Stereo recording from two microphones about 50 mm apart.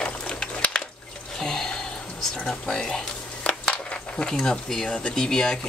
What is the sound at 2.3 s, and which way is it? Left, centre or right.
Speech, centre.